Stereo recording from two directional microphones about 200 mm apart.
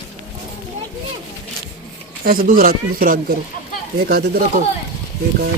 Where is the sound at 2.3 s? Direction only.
45° right (ahead or behind).